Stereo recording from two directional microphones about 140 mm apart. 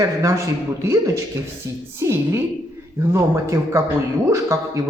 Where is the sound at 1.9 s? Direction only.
20° right (ahead or behind).